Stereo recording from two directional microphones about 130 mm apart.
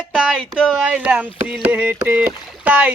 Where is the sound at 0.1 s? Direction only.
5° right (ahead or behind).